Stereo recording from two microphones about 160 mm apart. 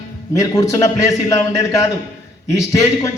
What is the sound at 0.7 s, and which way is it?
Speech, 20° left (ahead or behind).